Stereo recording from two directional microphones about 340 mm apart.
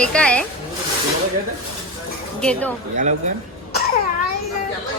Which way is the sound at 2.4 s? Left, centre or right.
Centre.